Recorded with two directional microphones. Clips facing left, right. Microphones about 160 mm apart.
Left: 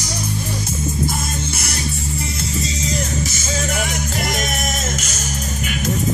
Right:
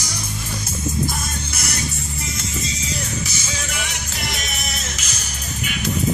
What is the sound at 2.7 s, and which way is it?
Music, 40° left (ahead or behind).